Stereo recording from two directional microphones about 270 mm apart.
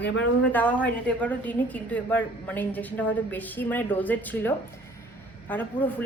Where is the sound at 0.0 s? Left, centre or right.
Left.